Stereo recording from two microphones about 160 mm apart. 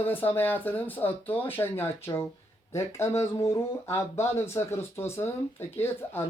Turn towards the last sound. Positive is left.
turn(degrees=15)  # may be behind; listen again after turning